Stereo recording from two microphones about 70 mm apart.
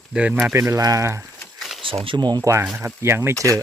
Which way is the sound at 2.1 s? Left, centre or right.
Right.